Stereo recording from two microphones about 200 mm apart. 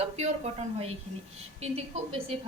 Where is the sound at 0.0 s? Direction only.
30° right (ahead or behind).